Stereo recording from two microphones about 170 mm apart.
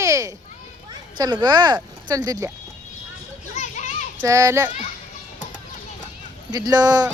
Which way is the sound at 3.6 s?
45° left (ahead or behind).